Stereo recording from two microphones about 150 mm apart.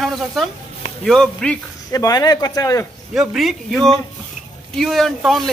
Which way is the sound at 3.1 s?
Centre (ahead or behind).